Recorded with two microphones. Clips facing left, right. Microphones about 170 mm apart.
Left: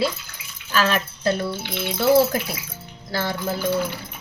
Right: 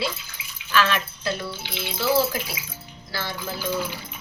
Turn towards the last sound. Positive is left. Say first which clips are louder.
# left 5 dB
turn(degrees=55)  # may be behind; listen again after turning